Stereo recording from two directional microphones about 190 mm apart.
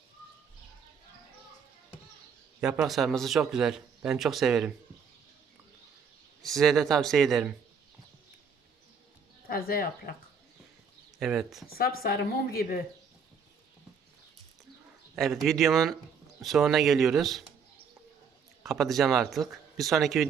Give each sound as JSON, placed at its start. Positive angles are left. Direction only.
{"t": 2.6, "sound": "speech", "side_deg": -5}
{"t": 6.4, "sound": "speech", "side_deg": 0}
{"t": 9.5, "sound": "a woman's voice", "side_deg": 50}
{"t": 11.2, "sound": "speech", "side_deg": 0}
{"t": 11.7, "sound": "a woman's voice", "side_deg": 50}
{"t": 15.1, "sound": "speech", "side_deg": 0}
{"t": 18.6, "sound": "speech", "side_deg": 0}